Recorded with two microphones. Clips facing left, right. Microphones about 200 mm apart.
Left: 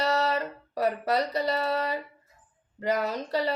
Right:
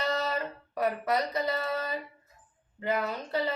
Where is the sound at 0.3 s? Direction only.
35° left (ahead or behind).